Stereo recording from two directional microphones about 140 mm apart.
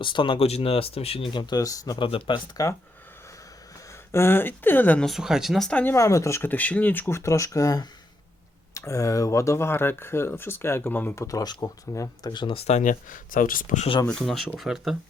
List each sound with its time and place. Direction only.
0.0 s speech: 35° left (ahead or behind)
2.0 s speech: 40° left (ahead or behind)
4.1 s speech: 15° left (ahead or behind)
5.0 s speech: centre (ahead or behind); by 12.6 s 35° left (ahead or behind)
12.6 s speech: 60° left (ahead or behind); by 13.8 s 75° left (ahead or behind)
14.1 s speech: centre (ahead or behind)